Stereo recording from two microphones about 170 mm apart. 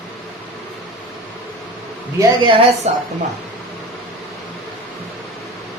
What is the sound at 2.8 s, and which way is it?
Speech, 40° right (ahead or behind).